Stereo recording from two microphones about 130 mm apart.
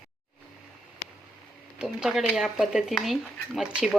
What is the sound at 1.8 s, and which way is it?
Speech, 5° right (ahead or behind).